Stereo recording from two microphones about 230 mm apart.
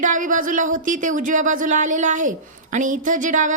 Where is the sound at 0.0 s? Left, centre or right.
Right.